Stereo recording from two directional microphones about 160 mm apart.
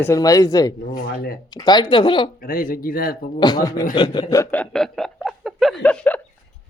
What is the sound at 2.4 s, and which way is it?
Speech, 65° left (ahead or behind).